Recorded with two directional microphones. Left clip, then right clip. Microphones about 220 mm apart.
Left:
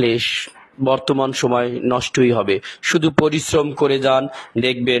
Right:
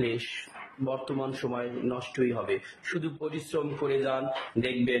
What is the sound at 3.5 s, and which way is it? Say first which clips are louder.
Speech: left 9 dB; 45° left (ahead or behind).